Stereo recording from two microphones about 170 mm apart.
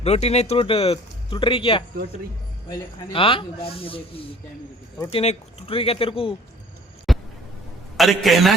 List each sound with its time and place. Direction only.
0.0 s speech: 40° left (ahead or behind)
7.1 s a sound: centre (ahead or behind)
7.9 s a man's voice: centre (ahead or behind)